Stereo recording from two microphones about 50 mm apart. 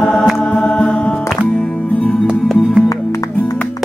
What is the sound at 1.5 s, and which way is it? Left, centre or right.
Music, centre.